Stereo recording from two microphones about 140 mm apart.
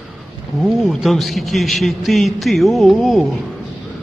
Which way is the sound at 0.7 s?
Centre (ahead or behind).